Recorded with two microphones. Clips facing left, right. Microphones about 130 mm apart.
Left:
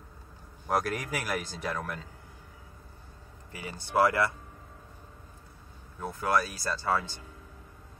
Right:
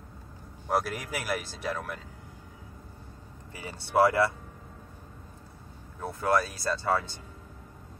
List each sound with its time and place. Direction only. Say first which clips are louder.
0.7 s speech: even; centre (ahead or behind)
3.5 s speech: right 2 dB; 30° right (ahead or behind)
5.9 s speech: right 2 dB; 25° right (ahead or behind)